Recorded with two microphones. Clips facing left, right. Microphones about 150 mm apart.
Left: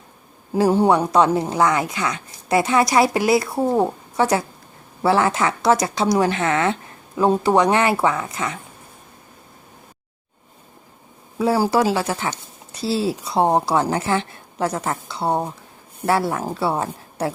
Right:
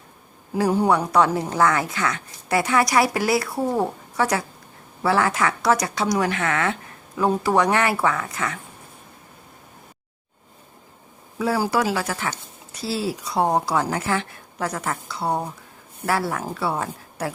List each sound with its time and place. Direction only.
0.5 s speech: 30° left (ahead or behind)
11.3 s speech: 30° left (ahead or behind)